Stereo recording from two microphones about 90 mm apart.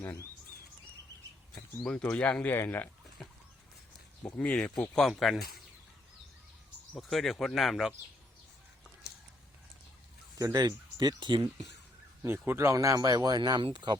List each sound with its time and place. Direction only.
0.0 s speech: 25° left (ahead or behind)
1.8 s speech: 10° left (ahead or behind)
4.4 s speech: 15° left (ahead or behind)
5.0 s speech: centre (ahead or behind)
6.9 s speech: centre (ahead or behind)
10.3 s speech: 45° right (ahead or behind)
12.2 s speech: 30° right (ahead or behind); by 14.0 s 55° right (ahead or behind)